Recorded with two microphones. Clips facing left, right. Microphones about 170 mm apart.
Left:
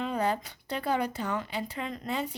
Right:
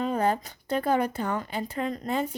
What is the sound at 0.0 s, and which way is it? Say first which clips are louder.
Speech: right 4 dB; 45° right (ahead or behind).